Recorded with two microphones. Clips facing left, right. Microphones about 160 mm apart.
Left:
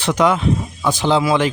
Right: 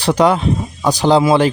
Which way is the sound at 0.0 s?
35° right (ahead or behind).